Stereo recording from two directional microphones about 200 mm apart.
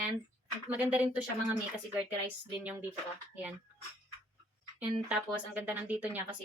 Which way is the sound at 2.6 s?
10° right (ahead or behind).